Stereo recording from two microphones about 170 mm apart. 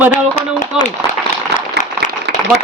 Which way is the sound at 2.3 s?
75° right (ahead or behind).